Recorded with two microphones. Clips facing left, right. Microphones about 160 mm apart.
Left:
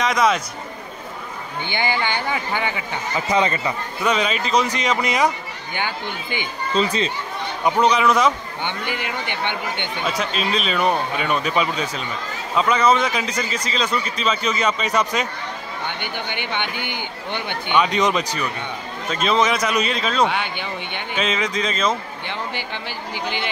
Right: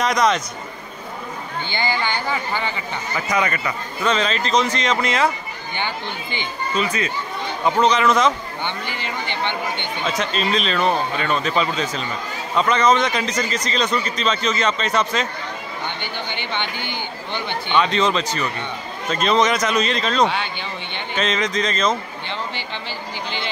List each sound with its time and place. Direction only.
0.0 s speech: 5° left (ahead or behind)
1.7 s a man's voice: 15° left (ahead or behind)
3.3 s speech: 25° left (ahead or behind)
4.0 s a man's voice: 10° left (ahead or behind)
6.8 s speech: 30° left (ahead or behind)
7.8 s a man's voice: 10° left (ahead or behind)